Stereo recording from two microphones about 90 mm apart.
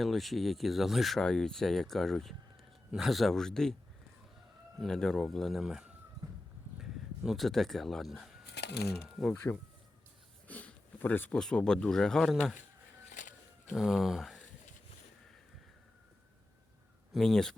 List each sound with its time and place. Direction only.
0.0 s speech: centre (ahead or behind)
4.8 s speech: 5° left (ahead or behind)
9.3 s speech: 30° left (ahead or behind)
10.5 s a sound: 15° left (ahead or behind)
11.3 s speech: 5° left (ahead or behind)
13.7 s speech: centre (ahead or behind)
17.2 s speech: 5° left (ahead or behind)